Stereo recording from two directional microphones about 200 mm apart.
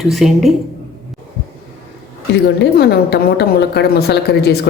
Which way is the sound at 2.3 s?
55° left (ahead or behind).